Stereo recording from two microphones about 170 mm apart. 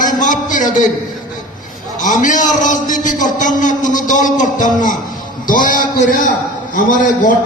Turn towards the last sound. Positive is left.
turn(degrees=50)  # may be behind; listen again after turning